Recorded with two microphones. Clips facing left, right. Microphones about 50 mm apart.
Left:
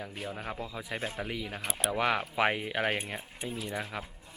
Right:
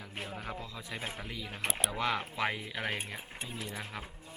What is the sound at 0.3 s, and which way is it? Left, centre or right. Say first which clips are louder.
Speech: left 3 dB; centre.